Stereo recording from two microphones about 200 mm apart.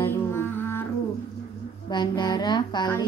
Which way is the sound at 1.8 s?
20° left (ahead or behind).